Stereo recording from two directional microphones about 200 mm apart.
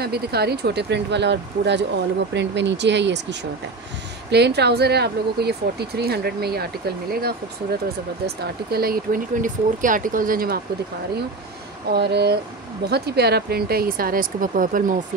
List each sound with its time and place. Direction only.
0.0 s speech: 50° right (ahead or behind)
8.7 s speech: 50° right (ahead or behind)
11.9 s speech: 55° right (ahead or behind)